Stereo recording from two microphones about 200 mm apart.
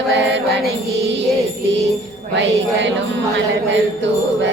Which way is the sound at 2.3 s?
65° right (ahead or behind).